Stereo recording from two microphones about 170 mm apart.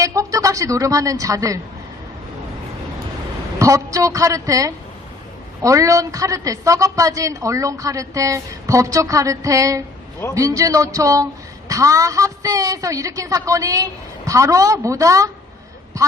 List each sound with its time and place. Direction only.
0.0 s a woman's voice: 20° right (ahead or behind)
3.6 s a woman's voice: 20° right (ahead or behind)